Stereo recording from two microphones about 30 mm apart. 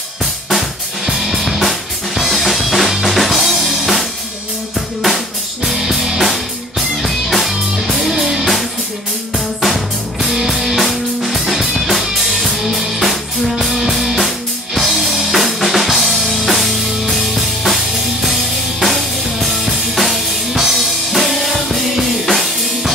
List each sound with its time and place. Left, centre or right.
1.1 s drum kit: centre
4.7 s music: centre
5.8 s music: centre
9.6 s music: centre